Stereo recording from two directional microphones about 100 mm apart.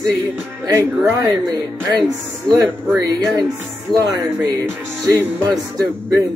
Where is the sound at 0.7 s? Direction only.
35° right (ahead or behind).